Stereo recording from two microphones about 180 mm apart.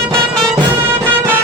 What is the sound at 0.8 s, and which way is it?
Music, 10° right (ahead or behind).